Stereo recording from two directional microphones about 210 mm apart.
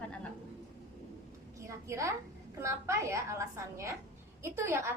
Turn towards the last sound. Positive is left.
turn(degrees=-10)  # may be behind; listen again after turning